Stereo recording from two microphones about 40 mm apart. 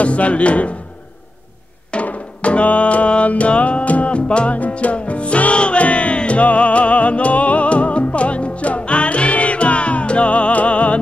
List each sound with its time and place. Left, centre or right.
0.0 s speech: left
2.0 s music: left